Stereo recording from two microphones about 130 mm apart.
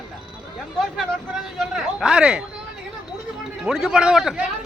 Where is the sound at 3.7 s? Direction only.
5° right (ahead or behind).